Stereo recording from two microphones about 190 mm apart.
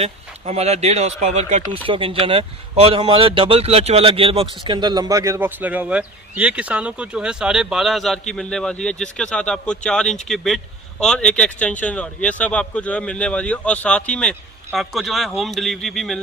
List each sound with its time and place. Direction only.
0.0 s speech: 35° right (ahead or behind); by 16.2 s centre (ahead or behind)